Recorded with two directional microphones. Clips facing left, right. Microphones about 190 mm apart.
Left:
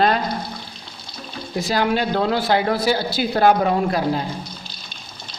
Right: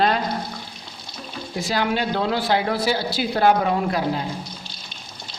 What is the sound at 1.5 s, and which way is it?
Speech, 40° left (ahead or behind).